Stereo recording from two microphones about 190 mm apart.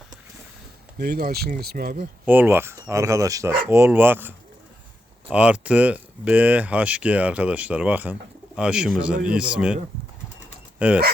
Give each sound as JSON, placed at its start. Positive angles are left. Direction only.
{"t": 0.9, "sound": "speech", "side_deg": -55}
{"t": 2.2, "sound": "speech", "side_deg": -10}
{"t": 10.8, "sound": "speech", "side_deg": -5}